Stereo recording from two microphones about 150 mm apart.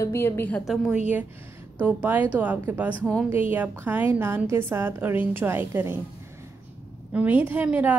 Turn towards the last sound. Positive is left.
turn(degrees=-10)  # may be behind; listen again after turning